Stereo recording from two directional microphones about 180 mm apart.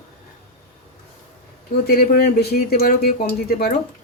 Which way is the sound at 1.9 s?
55° left (ahead or behind).